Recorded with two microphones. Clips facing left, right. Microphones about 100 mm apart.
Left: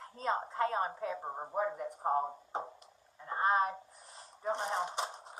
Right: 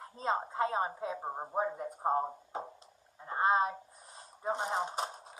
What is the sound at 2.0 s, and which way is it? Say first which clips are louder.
Speech: right 1 dB; 30° right (ahead or behind).